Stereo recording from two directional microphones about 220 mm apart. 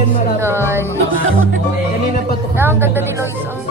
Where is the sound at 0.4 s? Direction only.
10° right (ahead or behind).